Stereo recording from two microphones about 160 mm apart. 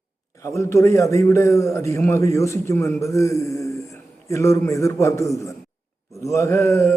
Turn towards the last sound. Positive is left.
turn(degrees=20)  # may be behind; listen again after turning